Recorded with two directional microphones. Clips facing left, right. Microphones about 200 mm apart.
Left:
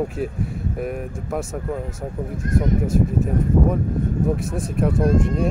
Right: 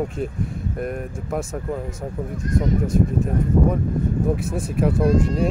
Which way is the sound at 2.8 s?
5° left (ahead or behind).